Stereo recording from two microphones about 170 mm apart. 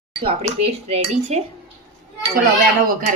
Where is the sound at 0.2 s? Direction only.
35° right (ahead or behind).